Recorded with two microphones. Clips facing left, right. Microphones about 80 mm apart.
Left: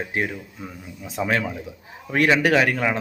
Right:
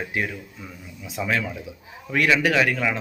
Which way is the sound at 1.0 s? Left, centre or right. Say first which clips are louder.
Left 2 dB; left.